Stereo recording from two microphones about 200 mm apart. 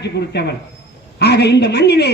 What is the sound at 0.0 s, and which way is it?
A man's voice, 55° left (ahead or behind).